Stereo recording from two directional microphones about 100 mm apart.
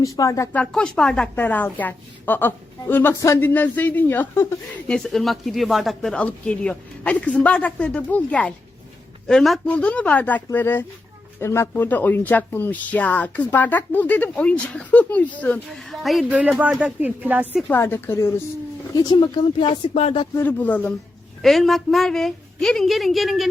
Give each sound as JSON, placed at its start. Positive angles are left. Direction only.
{"t": 0.0, "sound": "speech", "side_deg": 35}
{"t": 0.5, "sound": "a woman's voice", "side_deg": 10}
{"t": 4.9, "sound": "a woman's voice", "side_deg": 5}
{"t": 15.7, "sound": "a woman's voice", "side_deg": 0}
{"t": 16.3, "sound": "speech", "side_deg": -15}
{"t": 17.6, "sound": "a woman's voice", "side_deg": 20}
{"t": 18.9, "sound": "speech", "side_deg": 45}
{"t": 20.0, "sound": "speech", "side_deg": 90}
{"t": 20.4, "sound": "speech", "side_deg": 15}
{"t": 21.4, "sound": "a woman's voice", "side_deg": 0}